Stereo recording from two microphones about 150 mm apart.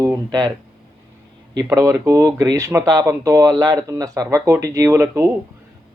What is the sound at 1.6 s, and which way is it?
Speech, 20° right (ahead or behind).